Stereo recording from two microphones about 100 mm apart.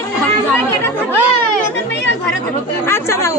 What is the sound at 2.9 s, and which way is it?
Speech, 25° left (ahead or behind).